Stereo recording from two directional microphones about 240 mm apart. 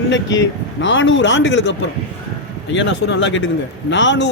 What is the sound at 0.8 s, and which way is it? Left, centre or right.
Speech, left.